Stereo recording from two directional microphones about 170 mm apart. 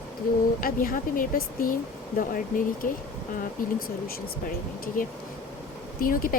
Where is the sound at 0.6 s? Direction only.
55° left (ahead or behind).